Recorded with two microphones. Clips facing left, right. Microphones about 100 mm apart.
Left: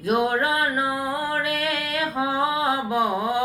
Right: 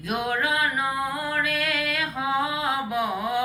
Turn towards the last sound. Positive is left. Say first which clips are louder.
# left 3 dB
turn(degrees=25)  # may be behind; listen again after turning